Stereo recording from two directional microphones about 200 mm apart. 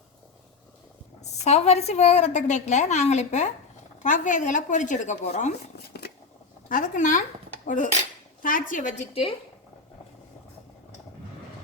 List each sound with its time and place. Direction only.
1.2 s a woman's voice: 35° left (ahead or behind)
5.7 s a sound: 55° left (ahead or behind)
6.7 s a woman's voice: 40° left (ahead or behind)